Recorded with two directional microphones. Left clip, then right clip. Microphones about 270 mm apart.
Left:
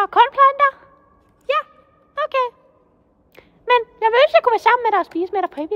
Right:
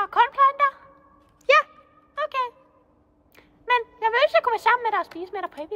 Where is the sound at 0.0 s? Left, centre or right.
Left.